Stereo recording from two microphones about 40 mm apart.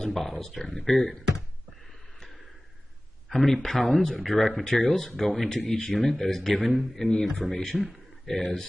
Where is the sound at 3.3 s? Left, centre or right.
Centre.